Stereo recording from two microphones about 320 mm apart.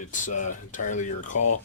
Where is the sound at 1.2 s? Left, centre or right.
Left.